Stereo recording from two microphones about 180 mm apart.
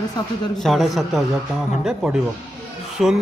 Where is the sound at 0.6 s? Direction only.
Centre (ahead or behind).